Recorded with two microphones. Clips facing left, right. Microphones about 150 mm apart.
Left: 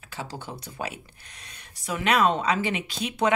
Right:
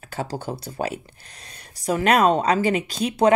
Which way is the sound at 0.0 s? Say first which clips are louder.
Right 8 dB; 45° right (ahead or behind).